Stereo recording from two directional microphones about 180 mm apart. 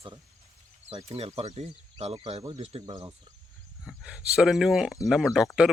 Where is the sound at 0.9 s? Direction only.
35° right (ahead or behind).